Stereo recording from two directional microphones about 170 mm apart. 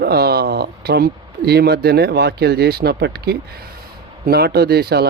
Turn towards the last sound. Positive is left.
turn(degrees=-70)  # may be behind; listen again after turning